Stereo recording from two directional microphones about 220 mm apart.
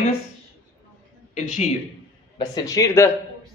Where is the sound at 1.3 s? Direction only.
30° left (ahead or behind).